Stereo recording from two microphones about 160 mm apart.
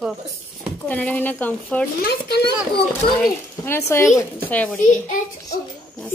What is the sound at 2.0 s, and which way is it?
Speech, 85° left.